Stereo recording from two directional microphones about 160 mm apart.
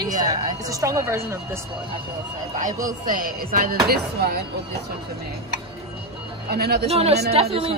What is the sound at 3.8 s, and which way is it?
Speech, 75° right (ahead or behind).